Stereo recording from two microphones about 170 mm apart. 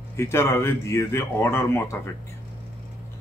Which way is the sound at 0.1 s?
15° left (ahead or behind).